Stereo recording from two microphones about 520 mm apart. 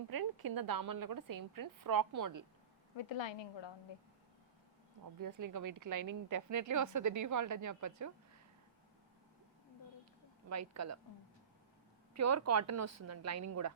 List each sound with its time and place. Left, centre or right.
0.1 s a woman's voice: right
3.0 s a woman's voice: left
5.2 s a woman's voice: right
10.5 s a woman's voice: right
12.1 s a woman's voice: right